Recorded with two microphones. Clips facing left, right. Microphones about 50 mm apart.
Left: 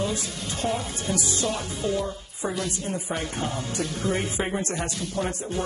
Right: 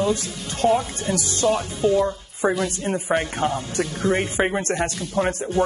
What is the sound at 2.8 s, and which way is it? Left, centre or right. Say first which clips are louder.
A woman's voice: right 7 dB; right.